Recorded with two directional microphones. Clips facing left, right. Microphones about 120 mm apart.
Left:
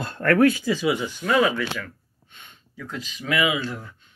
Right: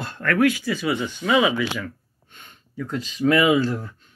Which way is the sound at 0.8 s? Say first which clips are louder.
Left 1 dB; 5° left (ahead or behind).